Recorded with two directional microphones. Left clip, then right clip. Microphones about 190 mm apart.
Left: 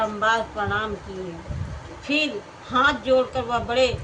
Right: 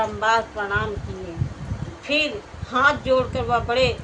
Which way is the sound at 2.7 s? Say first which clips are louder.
Right 1 dB; 5° right (ahead or behind).